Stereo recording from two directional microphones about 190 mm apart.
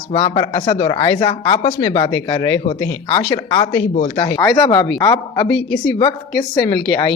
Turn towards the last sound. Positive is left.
turn(degrees=25)  # may be behind; listen again after turning